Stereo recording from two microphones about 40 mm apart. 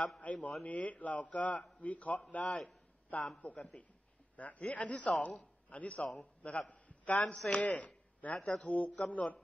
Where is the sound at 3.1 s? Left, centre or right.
Left.